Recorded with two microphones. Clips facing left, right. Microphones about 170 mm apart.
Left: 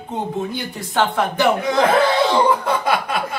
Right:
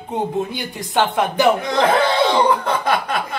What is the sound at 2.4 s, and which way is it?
Chuckle, 10° left (ahead or behind).